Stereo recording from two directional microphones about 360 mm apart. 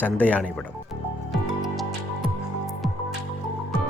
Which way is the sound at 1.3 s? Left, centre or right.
Centre.